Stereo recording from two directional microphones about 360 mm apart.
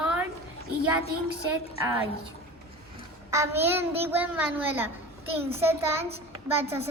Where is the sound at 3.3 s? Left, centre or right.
Centre.